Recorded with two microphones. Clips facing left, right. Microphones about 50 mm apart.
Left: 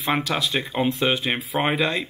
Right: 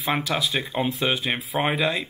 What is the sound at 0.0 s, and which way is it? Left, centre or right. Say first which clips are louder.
Speech: left 1 dB; centre.